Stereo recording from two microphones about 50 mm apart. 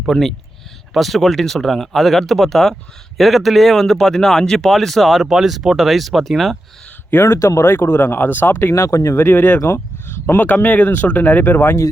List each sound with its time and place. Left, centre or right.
0.1 s speech: centre
7.2 s speech: left
7.9 s speech: left
8.7 s speech: left
9.3 s speech: left
9.6 s a sound: left
10.2 s speech: left